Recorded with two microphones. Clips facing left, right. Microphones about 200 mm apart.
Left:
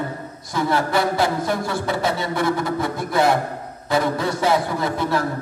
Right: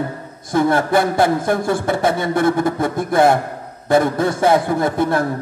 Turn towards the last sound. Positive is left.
turn(degrees=-55)  # may be behind; listen again after turning